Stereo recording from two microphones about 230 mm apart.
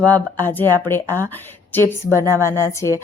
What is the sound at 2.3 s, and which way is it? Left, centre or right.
Speech, centre.